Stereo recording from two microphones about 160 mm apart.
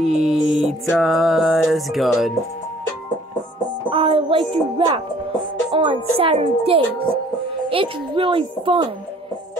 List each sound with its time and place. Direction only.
0.0 s music: centre (ahead or behind)
3.9 s speech: 35° right (ahead or behind)